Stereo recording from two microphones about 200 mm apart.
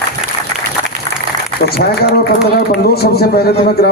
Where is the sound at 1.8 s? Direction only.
50° left (ahead or behind).